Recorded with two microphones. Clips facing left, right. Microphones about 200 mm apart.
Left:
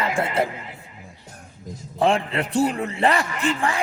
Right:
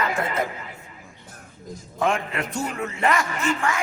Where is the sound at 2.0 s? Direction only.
30° left (ahead or behind).